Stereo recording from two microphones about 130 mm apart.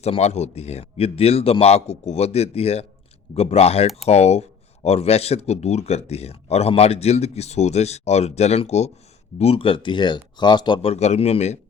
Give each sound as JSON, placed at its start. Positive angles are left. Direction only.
{"t": 0.0, "sound": "a man's voice", "side_deg": 55}
{"t": 9.4, "sound": "speech", "side_deg": 45}
{"t": 10.8, "sound": "speech", "side_deg": 55}